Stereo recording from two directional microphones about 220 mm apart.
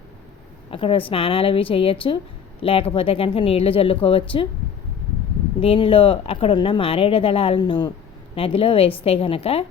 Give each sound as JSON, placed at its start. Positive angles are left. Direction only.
{"t": 0.7, "sound": "speech", "side_deg": 25}
{"t": 5.5, "sound": "speech", "side_deg": 25}